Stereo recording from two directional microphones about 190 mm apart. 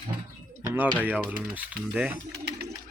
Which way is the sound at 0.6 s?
15° right (ahead or behind).